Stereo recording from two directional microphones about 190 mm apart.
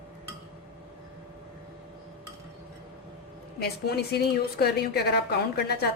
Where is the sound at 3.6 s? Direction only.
55° left (ahead or behind).